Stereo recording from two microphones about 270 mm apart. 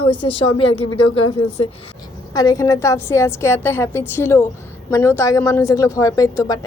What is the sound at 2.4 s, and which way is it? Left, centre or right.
Speech, centre.